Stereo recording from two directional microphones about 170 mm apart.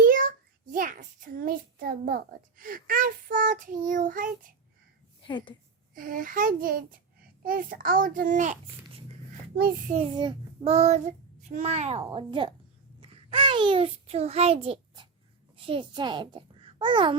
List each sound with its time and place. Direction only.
0.0 s a sound: 55° right (ahead or behind)
5.2 s a woman's voice: 30° left (ahead or behind)
5.9 s a sound: 55° right (ahead or behind)
7.4 s a child's voice: 55° right (ahead or behind)
9.6 s a child's voice: 60° right (ahead or behind)
10.1 s child singing: 25° right (ahead or behind)
12.1 s speech: 30° right (ahead or behind)
13.0 s a sound: 30° right (ahead or behind)
15.5 s a child's voice: 30° right (ahead or behind)